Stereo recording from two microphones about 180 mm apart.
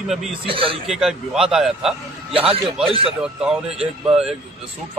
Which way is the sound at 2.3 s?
30° right (ahead or behind).